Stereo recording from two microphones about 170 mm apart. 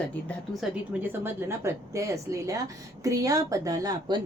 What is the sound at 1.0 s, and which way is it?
Speech, 15° right (ahead or behind).